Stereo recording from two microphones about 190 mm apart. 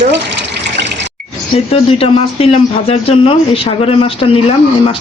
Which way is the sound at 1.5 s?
30° left (ahead or behind).